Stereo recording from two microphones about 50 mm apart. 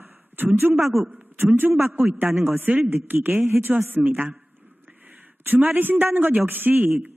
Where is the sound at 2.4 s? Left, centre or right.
Right.